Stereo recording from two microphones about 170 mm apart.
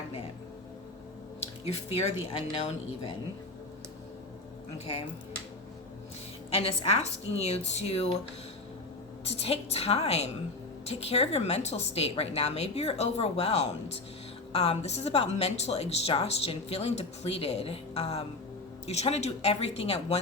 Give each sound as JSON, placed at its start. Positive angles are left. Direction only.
{"t": 1.6, "sound": "speech", "side_deg": 35}
{"t": 6.5, "sound": "speech", "side_deg": 35}
{"t": 9.2, "sound": "speech", "side_deg": 35}